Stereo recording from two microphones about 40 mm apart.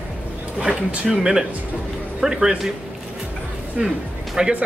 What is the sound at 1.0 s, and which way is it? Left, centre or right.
A man's voice, centre.